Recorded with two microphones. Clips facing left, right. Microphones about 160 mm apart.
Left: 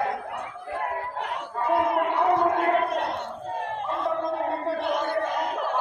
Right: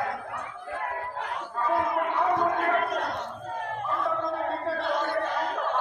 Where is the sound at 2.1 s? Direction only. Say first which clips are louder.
Left 3 dB; 25° left (ahead or behind).